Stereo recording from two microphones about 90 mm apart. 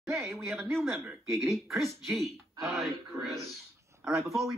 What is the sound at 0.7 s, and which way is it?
Speech, centre (ahead or behind).